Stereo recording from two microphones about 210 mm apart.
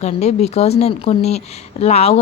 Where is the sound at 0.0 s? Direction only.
30° left (ahead or behind).